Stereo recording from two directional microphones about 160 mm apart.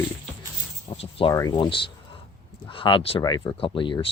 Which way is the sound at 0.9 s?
35° left (ahead or behind).